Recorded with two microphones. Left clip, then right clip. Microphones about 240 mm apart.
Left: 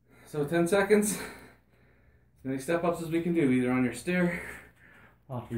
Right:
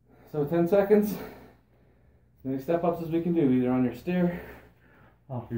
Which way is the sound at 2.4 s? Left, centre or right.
Left.